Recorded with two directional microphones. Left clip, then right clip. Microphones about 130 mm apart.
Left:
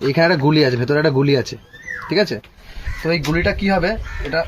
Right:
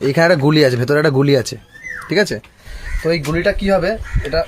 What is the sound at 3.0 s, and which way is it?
Speech, 40° right (ahead or behind).